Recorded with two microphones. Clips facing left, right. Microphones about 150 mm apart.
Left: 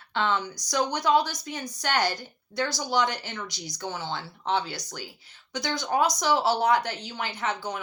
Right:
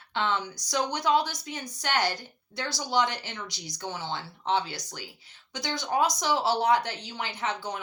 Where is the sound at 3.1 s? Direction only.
20° right (ahead or behind).